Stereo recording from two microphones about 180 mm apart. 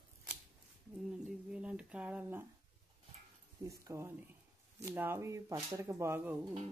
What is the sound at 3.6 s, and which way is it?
Speech, 15° right (ahead or behind).